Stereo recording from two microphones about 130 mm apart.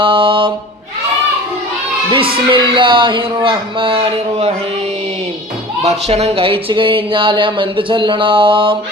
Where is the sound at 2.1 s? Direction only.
40° right (ahead or behind).